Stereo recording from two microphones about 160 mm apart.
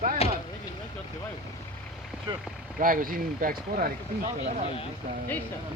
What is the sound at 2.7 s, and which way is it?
Speech, 60° right (ahead or behind).